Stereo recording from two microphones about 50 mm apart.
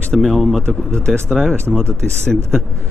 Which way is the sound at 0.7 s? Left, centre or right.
Centre.